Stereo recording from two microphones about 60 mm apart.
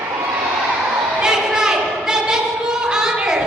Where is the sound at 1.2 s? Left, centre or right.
Centre.